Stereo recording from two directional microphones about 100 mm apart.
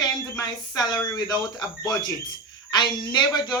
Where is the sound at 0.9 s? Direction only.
45° left (ahead or behind).